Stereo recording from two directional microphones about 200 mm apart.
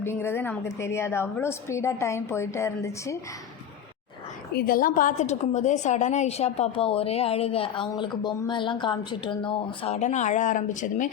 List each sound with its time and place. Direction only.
0.0 s a woman's voice: 10° left (ahead or behind)
4.5 s a woman's voice: 45° left (ahead or behind)